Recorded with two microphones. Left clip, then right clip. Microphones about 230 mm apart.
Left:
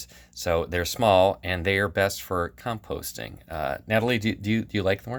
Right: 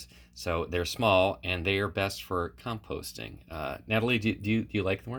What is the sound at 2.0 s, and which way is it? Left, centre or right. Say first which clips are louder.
Speech: left 7 dB; left.